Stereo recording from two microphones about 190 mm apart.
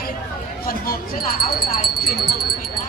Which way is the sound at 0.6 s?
50° left (ahead or behind).